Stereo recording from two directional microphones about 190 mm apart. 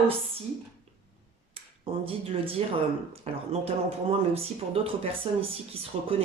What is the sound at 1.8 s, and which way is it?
Speech, 30° right (ahead or behind).